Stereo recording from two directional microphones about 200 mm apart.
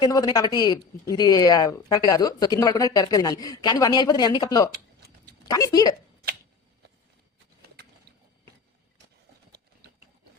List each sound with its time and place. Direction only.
0.0 s a woman's voice: 20° left (ahead or behind)